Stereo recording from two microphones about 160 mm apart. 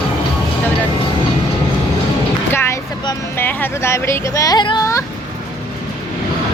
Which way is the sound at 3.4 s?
15° left (ahead or behind).